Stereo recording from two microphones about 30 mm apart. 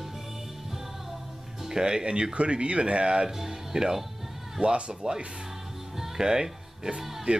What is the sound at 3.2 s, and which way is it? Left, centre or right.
Speech, centre.